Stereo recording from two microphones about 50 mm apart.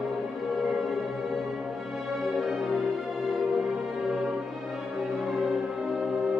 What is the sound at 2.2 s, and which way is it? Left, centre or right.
Music, centre.